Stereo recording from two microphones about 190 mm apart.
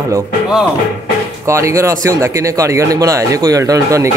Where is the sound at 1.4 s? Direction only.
15° right (ahead or behind).